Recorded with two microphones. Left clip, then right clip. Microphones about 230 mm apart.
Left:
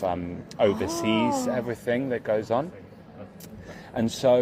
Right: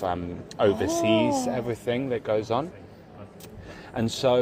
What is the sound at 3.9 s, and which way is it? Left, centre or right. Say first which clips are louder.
Speech: left 2 dB; centre.